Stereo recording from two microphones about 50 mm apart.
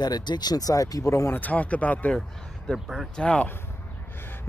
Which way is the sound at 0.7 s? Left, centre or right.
Left.